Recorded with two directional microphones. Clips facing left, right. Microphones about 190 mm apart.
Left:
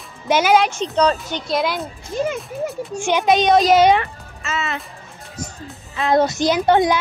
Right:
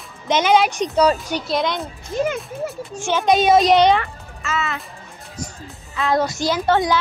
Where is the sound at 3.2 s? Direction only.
Centre (ahead or behind).